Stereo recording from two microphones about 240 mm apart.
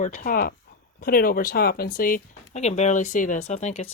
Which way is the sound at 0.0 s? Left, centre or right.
Left.